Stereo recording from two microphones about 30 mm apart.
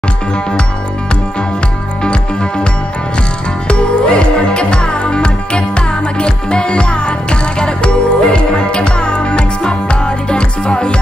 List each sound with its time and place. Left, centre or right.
3.6 s music: left